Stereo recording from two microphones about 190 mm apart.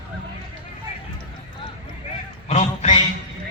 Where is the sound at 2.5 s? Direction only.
35° left (ahead or behind).